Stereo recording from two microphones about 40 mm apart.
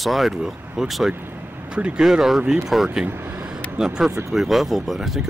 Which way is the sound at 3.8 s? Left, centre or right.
Centre.